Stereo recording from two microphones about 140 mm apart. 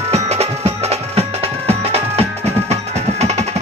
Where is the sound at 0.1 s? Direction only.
50° right (ahead or behind).